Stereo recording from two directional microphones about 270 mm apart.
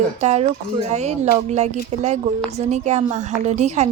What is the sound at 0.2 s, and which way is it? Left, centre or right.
A woman's voice, right.